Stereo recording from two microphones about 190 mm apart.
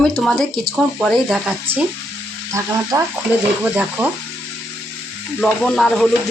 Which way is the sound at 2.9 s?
20° right (ahead or behind).